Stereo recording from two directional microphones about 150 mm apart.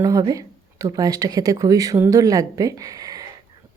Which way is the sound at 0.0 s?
25° right (ahead or behind).